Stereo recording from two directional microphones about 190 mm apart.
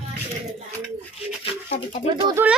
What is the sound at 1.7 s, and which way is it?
Speech, 45° left (ahead or behind).